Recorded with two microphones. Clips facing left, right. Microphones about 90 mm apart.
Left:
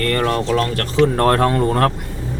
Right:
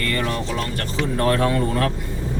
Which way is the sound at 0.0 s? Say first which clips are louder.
Left 6 dB; 50° left (ahead or behind).